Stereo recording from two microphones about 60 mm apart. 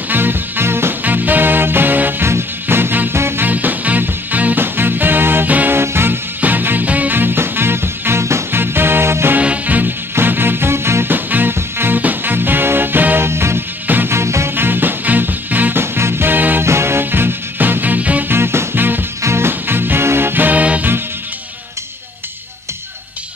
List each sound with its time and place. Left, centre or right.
0.1 s music: right
1.0 s music: right
3.4 s music: right
5.8 s music: right
9.4 s music: right
13.8 s music: right
14.1 s music: right
14.5 s music: right
15.8 s music: right
16.6 s music: right
18.3 s music: right